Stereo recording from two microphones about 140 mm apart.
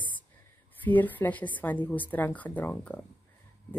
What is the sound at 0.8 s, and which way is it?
A woman's voice, 10° left (ahead or behind).